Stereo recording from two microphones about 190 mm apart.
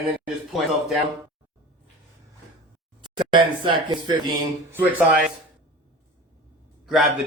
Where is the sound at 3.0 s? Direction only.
25° right (ahead or behind).